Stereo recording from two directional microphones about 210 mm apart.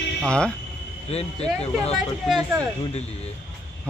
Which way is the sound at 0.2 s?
5° left (ahead or behind).